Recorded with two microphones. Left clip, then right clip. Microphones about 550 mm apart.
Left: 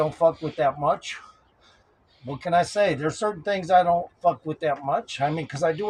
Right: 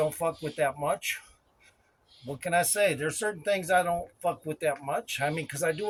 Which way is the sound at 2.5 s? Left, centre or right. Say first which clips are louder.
Left 5 dB; right.